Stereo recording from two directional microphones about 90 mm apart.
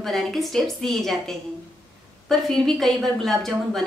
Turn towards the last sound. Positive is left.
turn(degrees=5)  # may be behind; listen again after turning